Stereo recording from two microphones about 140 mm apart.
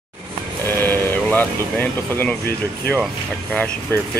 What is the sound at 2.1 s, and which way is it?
Speech, 15° left (ahead or behind).